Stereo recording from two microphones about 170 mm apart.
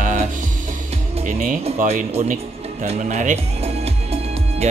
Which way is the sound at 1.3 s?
45° right (ahead or behind).